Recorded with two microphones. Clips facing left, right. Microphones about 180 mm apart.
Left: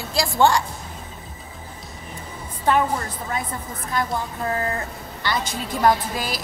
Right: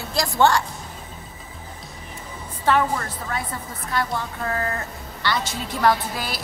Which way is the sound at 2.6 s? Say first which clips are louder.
Even; 20° left (ahead or behind).